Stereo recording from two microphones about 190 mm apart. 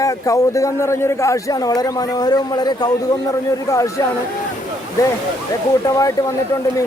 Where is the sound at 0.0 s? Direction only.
15° left (ahead or behind).